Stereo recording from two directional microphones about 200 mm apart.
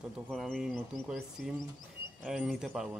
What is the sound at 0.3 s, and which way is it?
Speech, centre (ahead or behind).